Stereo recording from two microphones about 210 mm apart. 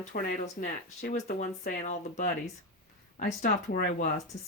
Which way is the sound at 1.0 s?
45° left (ahead or behind).